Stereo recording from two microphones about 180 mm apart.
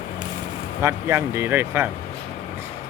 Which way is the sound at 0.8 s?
15° right (ahead or behind).